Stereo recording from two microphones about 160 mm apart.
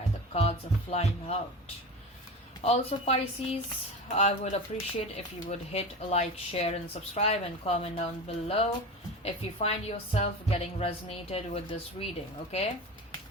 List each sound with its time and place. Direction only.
0.3 s speech: 40° left (ahead or behind)
2.6 s a woman's voice: 40° left (ahead or behind)